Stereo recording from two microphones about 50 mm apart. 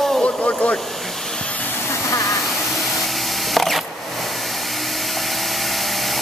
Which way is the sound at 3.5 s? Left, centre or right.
Centre.